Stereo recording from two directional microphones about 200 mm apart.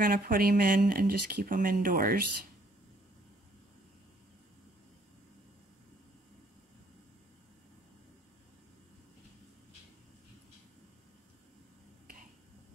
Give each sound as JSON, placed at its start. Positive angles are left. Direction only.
{"t": 0.0, "sound": "speech", "side_deg": -45}